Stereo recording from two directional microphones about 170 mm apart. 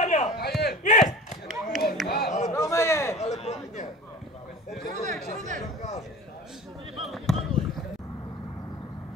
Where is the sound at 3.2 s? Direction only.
40° left (ahead or behind).